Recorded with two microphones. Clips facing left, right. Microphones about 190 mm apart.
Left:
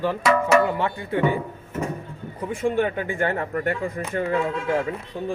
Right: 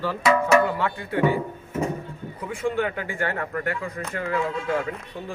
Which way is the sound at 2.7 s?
20° left (ahead or behind).